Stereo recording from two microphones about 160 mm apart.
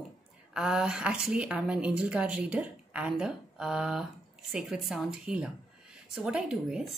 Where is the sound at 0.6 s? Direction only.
5° right (ahead or behind).